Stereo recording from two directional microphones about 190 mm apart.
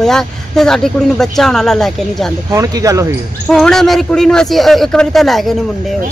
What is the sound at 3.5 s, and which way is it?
Speech, centre (ahead or behind).